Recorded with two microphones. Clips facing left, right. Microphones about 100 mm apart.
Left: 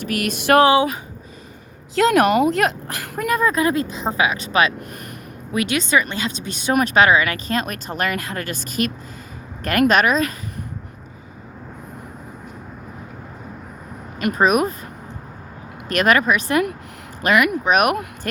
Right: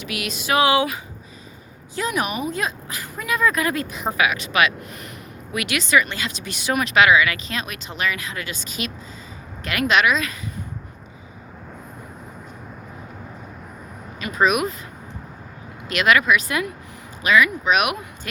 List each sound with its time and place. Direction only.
0.1 s speech: 50° left (ahead or behind)
2.0 s speech: 85° left; by 3.2 s 60° left (ahead or behind)
3.2 s speech: 40° left (ahead or behind)
3.5 s speech: 30° left (ahead or behind)
14.3 s speech: 40° left (ahead or behind)
15.9 s speech: 45° left (ahead or behind)
17.2 s speech: 60° left (ahead or behind)
17.7 s speech: 40° left (ahead or behind)